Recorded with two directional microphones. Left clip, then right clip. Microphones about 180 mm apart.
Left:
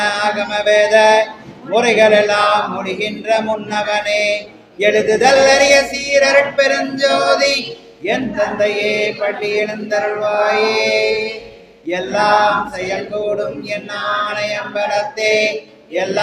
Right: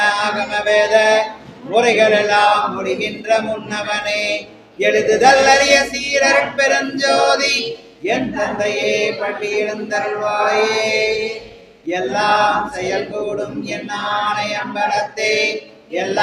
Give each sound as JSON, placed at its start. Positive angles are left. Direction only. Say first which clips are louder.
{"t": 0.0, "sound": "mantra", "louder": "even", "side_deg": 20}
{"t": 1.7, "sound": "chant", "louder": "left 2 dB", "side_deg": 15}
{"t": 11.9, "sound": "male singing", "louder": "left 2 dB", "side_deg": 20}
{"t": 13.7, "sound": "chant", "louder": "left 2 dB", "side_deg": 20}